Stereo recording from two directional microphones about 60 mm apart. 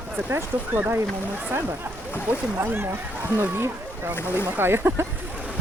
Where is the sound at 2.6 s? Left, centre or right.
Right.